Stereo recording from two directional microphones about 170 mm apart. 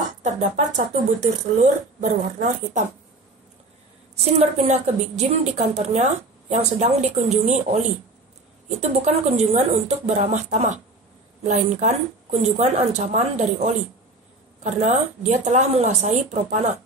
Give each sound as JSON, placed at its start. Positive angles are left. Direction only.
{"t": 0.2, "sound": "speech", "side_deg": -45}
{"t": 4.2, "sound": "a woman's voice", "side_deg": -40}
{"t": 8.6, "sound": "speech", "side_deg": -40}